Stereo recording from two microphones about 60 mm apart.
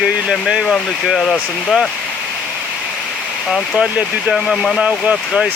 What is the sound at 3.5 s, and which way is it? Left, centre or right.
Speech, centre.